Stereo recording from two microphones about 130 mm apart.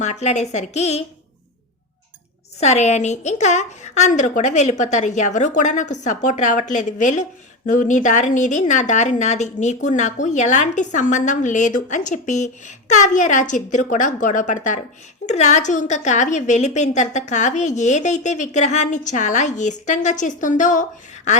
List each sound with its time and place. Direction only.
0.0 s a woman's voice: 65° left (ahead or behind)
2.6 s a woman's voice: 60° left (ahead or behind); by 14.8 s 75° left (ahead or behind)
15.3 s a woman's voice: 65° left (ahead or behind); by 20.8 s 80° left
21.3 s a woman's voice: 60° left (ahead or behind)